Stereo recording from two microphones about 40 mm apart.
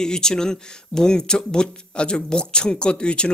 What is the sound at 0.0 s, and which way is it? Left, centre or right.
Speech, centre.